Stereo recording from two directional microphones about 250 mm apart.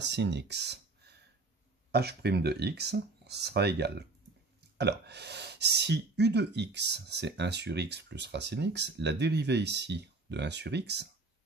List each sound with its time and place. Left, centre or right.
0.0 s speech: right